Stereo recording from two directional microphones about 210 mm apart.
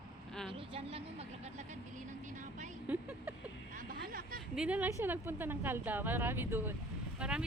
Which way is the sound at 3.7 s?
45° right (ahead or behind).